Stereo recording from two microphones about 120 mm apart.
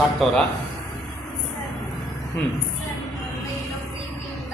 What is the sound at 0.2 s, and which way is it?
Speech, 5° left (ahead or behind).